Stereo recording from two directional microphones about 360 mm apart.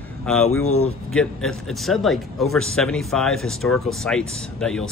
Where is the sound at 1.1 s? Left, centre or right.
Centre.